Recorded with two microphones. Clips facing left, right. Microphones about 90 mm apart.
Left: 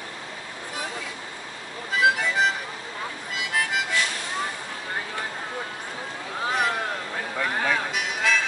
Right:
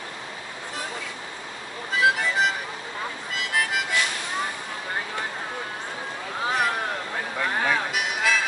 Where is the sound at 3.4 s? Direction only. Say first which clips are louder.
Even; centre (ahead or behind).